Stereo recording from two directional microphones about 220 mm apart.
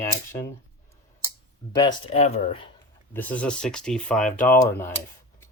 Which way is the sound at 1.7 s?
20° left (ahead or behind).